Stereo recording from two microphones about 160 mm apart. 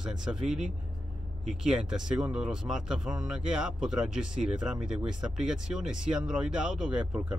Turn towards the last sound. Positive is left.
turn(degrees=-5)  # may be behind; listen again after turning